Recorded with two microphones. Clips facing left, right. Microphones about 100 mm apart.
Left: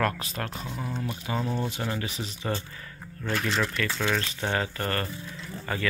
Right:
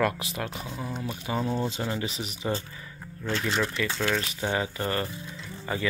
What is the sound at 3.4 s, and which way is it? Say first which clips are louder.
Speech: even; 5° right (ahead or behind).